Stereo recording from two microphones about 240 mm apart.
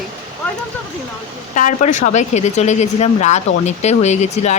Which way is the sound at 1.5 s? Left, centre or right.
Left.